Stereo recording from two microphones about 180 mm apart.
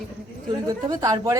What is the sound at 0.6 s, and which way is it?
Speech, 20° right (ahead or behind).